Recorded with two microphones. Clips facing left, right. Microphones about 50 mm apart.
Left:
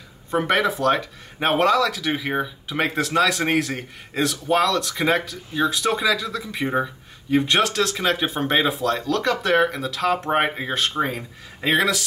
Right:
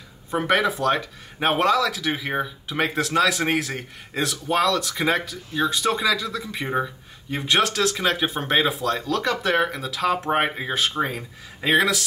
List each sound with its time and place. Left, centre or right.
0.3 s speech: centre